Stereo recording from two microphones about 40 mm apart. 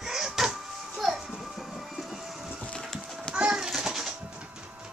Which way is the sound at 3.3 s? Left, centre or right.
Right.